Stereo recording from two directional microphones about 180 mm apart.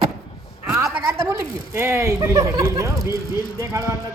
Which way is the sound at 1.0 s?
15° right (ahead or behind).